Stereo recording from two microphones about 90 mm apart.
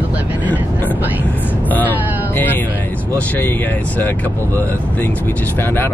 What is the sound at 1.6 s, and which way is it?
Speech, 20° left (ahead or behind).